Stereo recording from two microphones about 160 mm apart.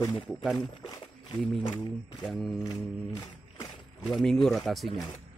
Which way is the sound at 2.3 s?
Centre (ahead or behind).